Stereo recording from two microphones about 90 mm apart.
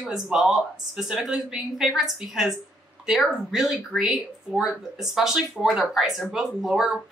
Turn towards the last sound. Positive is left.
turn(degrees=-5)  # may be behind; listen again after turning